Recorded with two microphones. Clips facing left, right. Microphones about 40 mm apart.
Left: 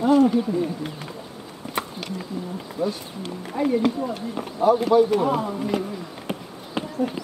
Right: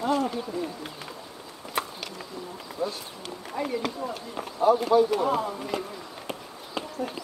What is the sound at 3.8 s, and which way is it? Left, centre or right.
Speech, centre.